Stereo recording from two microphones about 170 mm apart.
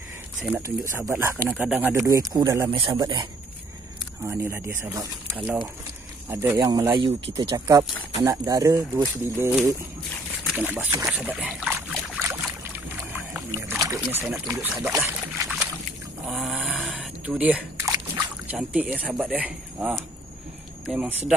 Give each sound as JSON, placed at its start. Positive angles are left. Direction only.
{"t": 0.6, "sound": "speech", "side_deg": -15}
{"t": 4.3, "sound": "speech", "side_deg": -15}
{"t": 11.1, "sound": "boat", "side_deg": -5}
{"t": 13.1, "sound": "rowboat", "side_deg": -15}
{"t": 14.4, "sound": "speech", "side_deg": -20}
{"t": 15.4, "sound": "a sound", "side_deg": 0}
{"t": 16.7, "sound": "a sound", "side_deg": 10}
{"t": 17.3, "sound": "a sound", "side_deg": -10}
{"t": 19.1, "sound": "speech", "side_deg": -10}